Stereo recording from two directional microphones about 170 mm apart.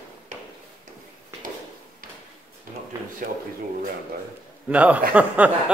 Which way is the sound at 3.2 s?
55° right (ahead or behind).